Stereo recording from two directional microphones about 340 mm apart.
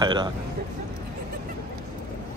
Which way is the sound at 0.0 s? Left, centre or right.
Centre.